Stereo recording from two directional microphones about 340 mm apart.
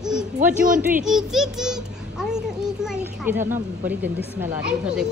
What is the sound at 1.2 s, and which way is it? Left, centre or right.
A child's voice, centre.